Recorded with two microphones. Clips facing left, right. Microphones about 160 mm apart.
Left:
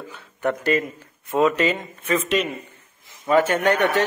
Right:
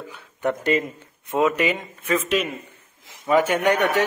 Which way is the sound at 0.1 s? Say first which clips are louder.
Even; 15° right (ahead or behind).